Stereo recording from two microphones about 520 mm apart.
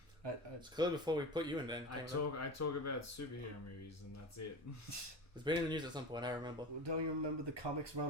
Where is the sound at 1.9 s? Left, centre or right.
Left.